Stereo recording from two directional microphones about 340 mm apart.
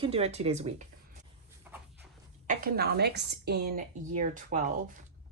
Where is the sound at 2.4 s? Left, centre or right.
Right.